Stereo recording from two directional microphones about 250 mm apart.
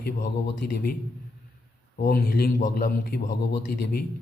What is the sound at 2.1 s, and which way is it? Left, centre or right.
A man's voice, left.